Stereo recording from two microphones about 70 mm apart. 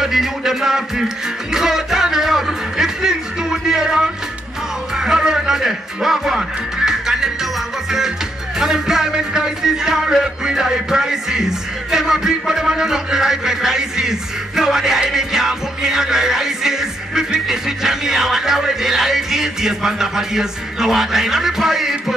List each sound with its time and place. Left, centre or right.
0.0 s music: centre
8.5 s music: centre